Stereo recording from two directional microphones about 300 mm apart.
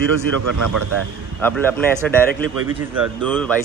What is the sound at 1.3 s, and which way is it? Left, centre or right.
A man's voice, centre.